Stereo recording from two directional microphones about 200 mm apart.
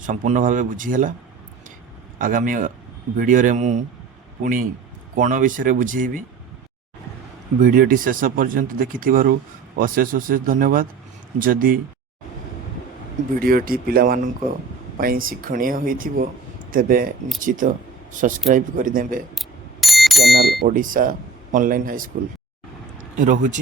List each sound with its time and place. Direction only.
0.0 s speech: 40° right (ahead or behind)
2.1 s speech: 40° right (ahead or behind)
5.1 s speech: 40° right (ahead or behind)
7.6 s speech: 45° right (ahead or behind)
13.4 s speech: 45° right (ahead or behind)
19.4 s bicycle bell: centre (ahead or behind)
20.6 s speech: 45° right (ahead or behind)
23.1 s speech: 40° right (ahead or behind)